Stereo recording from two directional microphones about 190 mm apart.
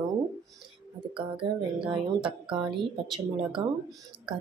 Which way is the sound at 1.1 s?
25° right (ahead or behind).